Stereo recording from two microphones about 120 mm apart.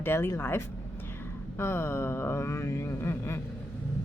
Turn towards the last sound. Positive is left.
turn(degrees=20)  # may be behind; listen again after turning